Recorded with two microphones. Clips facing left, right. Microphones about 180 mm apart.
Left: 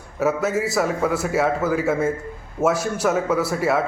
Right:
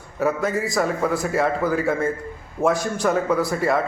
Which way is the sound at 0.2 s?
5° left (ahead or behind).